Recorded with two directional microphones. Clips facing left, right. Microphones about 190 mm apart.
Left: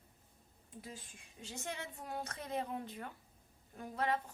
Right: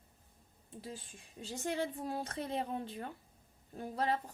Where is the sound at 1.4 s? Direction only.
35° right (ahead or behind).